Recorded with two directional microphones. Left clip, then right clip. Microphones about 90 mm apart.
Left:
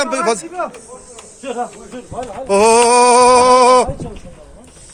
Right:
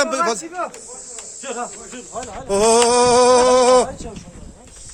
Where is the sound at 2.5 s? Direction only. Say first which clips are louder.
Left 4 dB; 20° right (ahead or behind).